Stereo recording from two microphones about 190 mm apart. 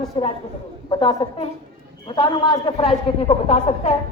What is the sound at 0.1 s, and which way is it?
A man's voice, 25° left (ahead or behind).